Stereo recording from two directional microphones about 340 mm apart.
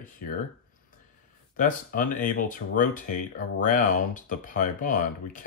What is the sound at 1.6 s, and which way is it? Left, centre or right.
Speech, left.